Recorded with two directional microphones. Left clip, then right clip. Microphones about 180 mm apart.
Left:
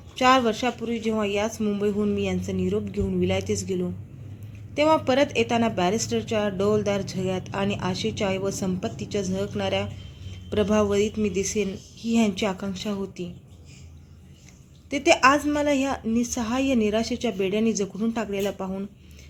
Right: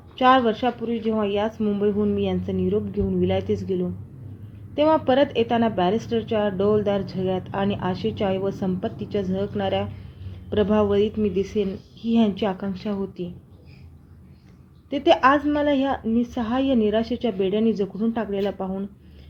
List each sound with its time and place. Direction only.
0.2 s a woman's voice: centre (ahead or behind)
4.7 s a woman's voice: centre (ahead or behind)
14.8 s a woman's voice: centre (ahead or behind)